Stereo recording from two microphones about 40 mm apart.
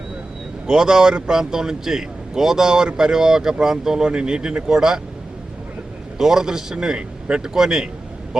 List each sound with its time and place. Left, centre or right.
0.7 s speech: centre
6.1 s a man's voice: centre
7.4 s speech: centre